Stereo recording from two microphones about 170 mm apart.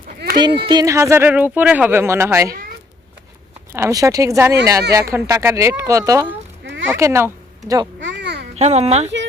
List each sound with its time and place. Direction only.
0.3 s speech: 25° right (ahead or behind)
3.7 s speech: 15° right (ahead or behind)
8.0 s a sound: 90° right
8.5 s speech: 40° right (ahead or behind)